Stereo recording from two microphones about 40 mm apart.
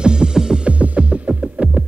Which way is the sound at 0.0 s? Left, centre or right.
Right.